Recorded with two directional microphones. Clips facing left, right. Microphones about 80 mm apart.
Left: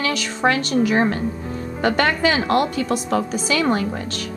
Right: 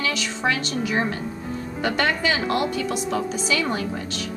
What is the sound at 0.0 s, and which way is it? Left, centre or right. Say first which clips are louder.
A woman's voice: left 4 dB; left.